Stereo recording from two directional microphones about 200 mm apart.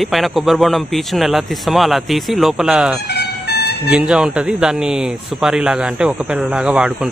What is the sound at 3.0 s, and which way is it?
Music, 55° left (ahead or behind).